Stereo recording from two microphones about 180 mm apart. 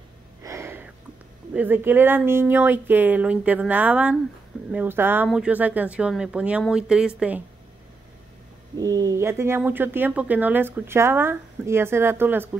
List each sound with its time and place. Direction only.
0.4 s a sound: 15° right (ahead or behind)
1.5 s speech: 10° right (ahead or behind)
8.7 s speech: 20° right (ahead or behind)